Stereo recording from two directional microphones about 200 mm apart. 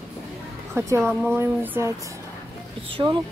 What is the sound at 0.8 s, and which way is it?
Speech, 15° right (ahead or behind).